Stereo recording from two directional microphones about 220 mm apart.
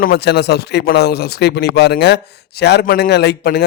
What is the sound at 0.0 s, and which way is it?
Speech, 45° left (ahead or behind).